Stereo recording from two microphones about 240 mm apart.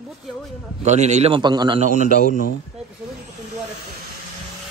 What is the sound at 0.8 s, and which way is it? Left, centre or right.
A man's voice, right.